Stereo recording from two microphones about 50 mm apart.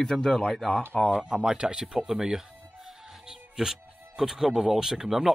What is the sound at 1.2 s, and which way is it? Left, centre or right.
Speech, centre.